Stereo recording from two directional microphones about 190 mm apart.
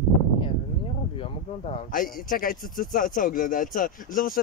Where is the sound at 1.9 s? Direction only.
45° left (ahead or behind).